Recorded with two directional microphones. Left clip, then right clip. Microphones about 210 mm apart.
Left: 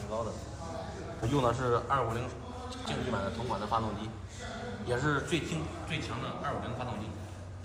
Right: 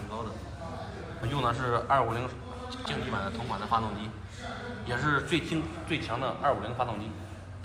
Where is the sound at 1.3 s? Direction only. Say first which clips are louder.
Even; 35° left (ahead or behind); by 6.9 s 5° right (ahead or behind).